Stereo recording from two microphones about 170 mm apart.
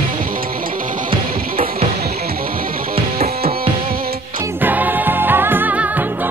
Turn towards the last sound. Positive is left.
turn(degrees=-10)  # may be behind; listen again after turning